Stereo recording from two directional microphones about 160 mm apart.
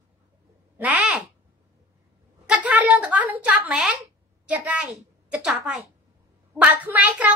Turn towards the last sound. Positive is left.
turn(degrees=-10)  # may be behind; listen again after turning